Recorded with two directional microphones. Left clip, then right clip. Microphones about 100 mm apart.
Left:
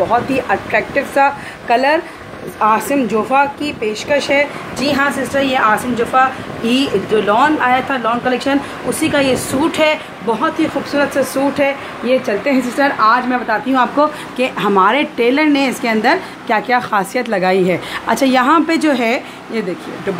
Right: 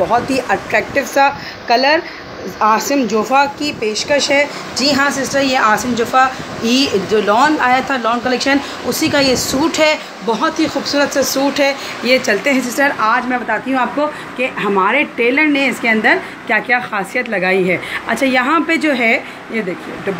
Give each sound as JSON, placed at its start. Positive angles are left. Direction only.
{"t": 0.0, "sound": "speech", "side_deg": 0}
{"t": 12.4, "sound": "a woman's voice", "side_deg": 10}
{"t": 13.7, "sound": "a woman's voice", "side_deg": 35}